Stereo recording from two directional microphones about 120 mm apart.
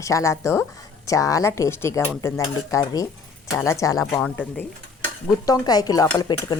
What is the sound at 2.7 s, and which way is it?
A woman's voice, 30° left (ahead or behind).